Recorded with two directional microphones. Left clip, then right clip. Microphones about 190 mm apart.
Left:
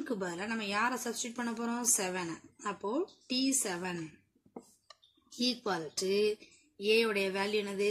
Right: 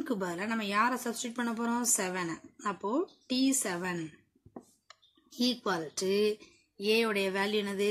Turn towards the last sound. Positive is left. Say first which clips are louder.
# right 1 dB
turn(degrees=-20)  # may be behind; listen again after turning